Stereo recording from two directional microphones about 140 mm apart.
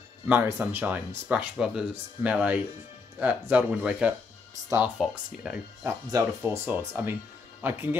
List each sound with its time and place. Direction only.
0.3 s speech: 15° right (ahead or behind)
4.9 s speech: 5° left (ahead or behind)
5.9 s speech: 15° right (ahead or behind)